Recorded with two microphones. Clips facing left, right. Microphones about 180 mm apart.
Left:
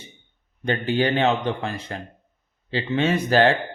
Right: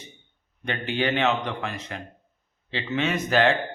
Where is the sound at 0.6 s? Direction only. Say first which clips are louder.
Left 5 dB; 35° left (ahead or behind).